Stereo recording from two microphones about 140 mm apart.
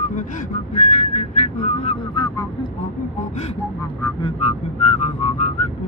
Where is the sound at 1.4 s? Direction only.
50° left (ahead or behind).